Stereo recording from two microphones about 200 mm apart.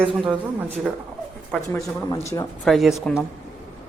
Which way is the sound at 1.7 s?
15° left (ahead or behind).